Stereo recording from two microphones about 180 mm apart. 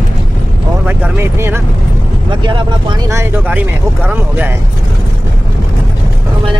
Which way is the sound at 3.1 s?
10° right (ahead or behind).